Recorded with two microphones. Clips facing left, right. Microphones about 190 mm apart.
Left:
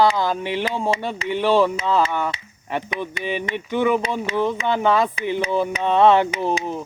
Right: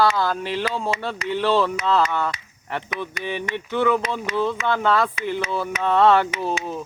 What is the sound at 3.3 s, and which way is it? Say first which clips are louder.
Music: left 2 dB; 15° left (ahead or behind).